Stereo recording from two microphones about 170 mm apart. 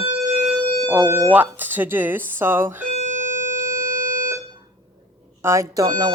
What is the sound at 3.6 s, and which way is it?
Music, 15° right (ahead or behind).